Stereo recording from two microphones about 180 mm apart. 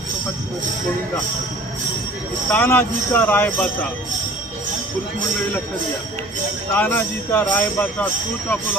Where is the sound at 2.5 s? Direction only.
10° left (ahead or behind).